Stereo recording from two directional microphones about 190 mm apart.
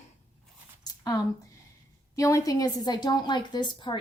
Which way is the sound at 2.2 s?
15° left (ahead or behind).